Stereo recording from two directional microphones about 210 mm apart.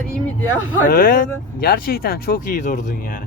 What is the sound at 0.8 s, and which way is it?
Speech, 40° left (ahead or behind).